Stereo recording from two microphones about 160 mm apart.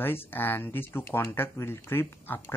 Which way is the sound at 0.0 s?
15° left (ahead or behind).